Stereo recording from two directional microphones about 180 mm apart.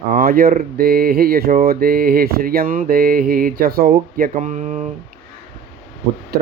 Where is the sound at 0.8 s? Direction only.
55° right (ahead or behind).